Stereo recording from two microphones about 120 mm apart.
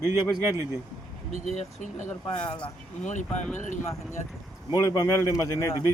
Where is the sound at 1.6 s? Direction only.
80° left.